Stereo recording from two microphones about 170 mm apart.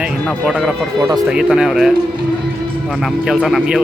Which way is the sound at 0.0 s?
5° right (ahead or behind).